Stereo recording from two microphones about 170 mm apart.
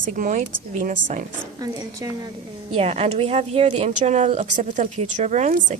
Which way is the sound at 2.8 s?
35° right (ahead or behind).